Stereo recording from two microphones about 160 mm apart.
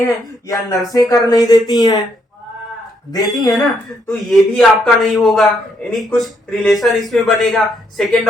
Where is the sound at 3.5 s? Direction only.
Centre (ahead or behind).